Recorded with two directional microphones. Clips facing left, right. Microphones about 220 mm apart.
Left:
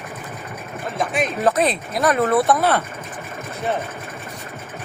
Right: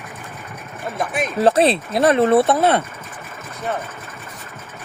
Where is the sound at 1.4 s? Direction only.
30° right (ahead or behind).